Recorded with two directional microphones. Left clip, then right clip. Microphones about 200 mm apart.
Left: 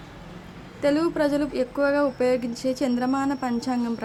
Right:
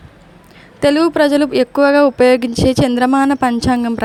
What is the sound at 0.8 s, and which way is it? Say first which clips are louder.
A woman's voice: right 10 dB; 40° right (ahead or behind).